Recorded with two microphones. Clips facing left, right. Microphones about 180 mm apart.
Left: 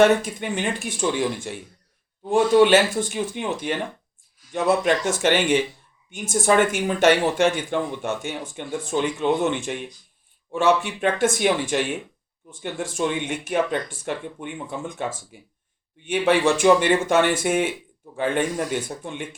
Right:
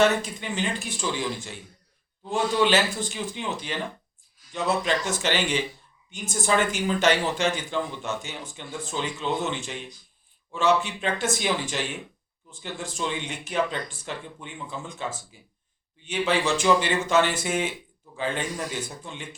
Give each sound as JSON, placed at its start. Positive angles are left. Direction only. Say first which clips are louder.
{"t": 0.0, "sound": "speech", "louder": "left 5 dB", "side_deg": 55}